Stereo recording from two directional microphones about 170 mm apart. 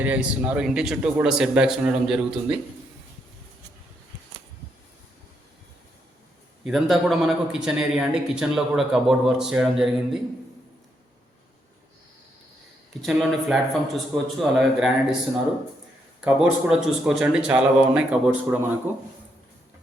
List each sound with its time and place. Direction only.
0.0 s a man's voice: 10° right (ahead or behind)
6.7 s a man's voice: centre (ahead or behind)
12.9 s a man's voice: centre (ahead or behind)
16.2 s a man's voice: 5° right (ahead or behind)